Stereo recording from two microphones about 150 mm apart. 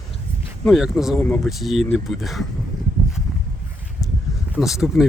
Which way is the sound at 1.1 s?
10° left (ahead or behind).